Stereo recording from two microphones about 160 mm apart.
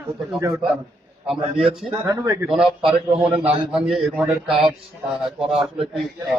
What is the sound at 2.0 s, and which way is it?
Speech, 20° right (ahead or behind).